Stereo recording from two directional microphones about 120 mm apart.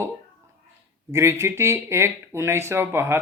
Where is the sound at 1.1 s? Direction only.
25° right (ahead or behind).